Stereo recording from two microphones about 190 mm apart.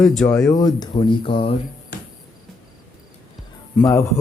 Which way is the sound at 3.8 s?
15° left (ahead or behind).